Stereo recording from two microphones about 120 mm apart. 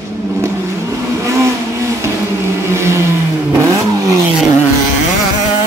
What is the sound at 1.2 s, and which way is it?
Vehicle, 25° right (ahead or behind).